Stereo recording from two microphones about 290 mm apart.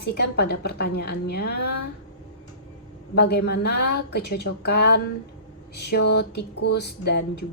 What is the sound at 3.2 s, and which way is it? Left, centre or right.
A woman's voice, left.